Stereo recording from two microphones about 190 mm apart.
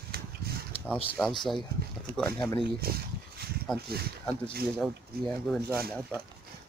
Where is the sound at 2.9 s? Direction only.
55° right (ahead or behind).